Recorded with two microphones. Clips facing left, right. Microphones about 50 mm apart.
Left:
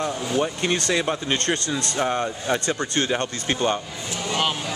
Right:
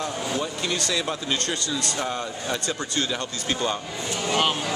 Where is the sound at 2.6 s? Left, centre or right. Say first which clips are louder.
Left 3 dB; left.